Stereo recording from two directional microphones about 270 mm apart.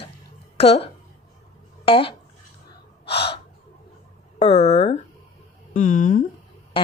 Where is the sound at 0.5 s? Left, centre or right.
Left.